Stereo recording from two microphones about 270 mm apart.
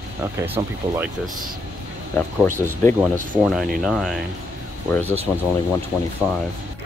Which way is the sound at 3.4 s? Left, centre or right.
Centre.